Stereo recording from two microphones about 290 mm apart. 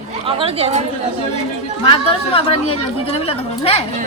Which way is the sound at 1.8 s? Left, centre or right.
Centre.